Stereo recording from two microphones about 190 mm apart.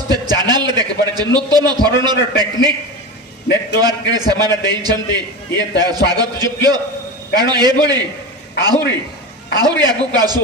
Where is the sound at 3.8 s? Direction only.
20° right (ahead or behind).